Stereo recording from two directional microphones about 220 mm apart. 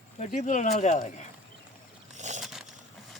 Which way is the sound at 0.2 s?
35° left (ahead or behind).